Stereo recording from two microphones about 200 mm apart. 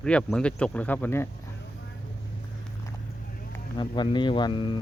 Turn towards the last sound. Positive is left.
turn(degrees=25)  # may be behind; listen again after turning